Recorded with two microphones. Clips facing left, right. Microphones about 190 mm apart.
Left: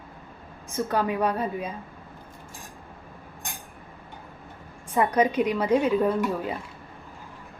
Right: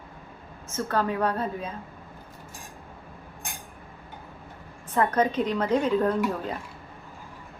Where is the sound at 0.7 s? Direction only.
15° left (ahead or behind).